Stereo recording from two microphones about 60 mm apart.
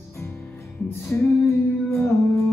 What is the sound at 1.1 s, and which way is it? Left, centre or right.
Music, left.